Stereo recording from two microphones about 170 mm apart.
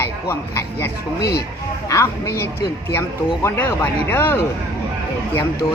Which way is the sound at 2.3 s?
65° left (ahead or behind).